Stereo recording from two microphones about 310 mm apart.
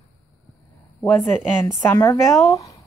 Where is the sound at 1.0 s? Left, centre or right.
Centre.